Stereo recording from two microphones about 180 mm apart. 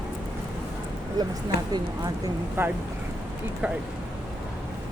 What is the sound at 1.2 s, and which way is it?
Speech, 20° right (ahead or behind).